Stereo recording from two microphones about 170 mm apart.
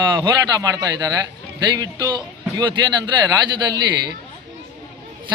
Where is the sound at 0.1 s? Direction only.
20° right (ahead or behind).